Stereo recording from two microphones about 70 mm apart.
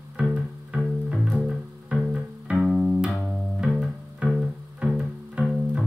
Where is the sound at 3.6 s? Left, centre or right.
Centre.